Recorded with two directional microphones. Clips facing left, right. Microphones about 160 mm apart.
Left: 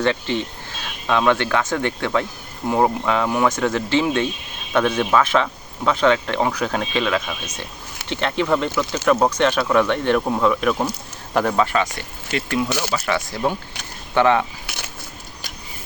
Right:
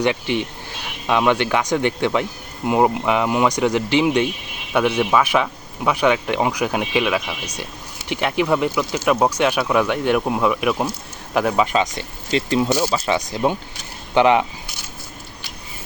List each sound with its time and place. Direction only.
0.0 s speech: 15° right (ahead or behind)
11.6 s speech: 20° right (ahead or behind)